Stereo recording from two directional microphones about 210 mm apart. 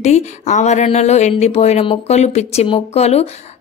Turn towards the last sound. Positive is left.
turn(degrees=30)  # may be behind; listen again after turning